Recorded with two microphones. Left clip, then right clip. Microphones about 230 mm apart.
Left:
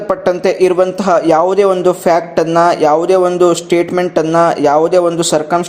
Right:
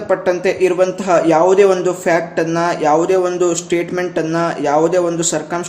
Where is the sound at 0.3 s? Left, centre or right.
Left.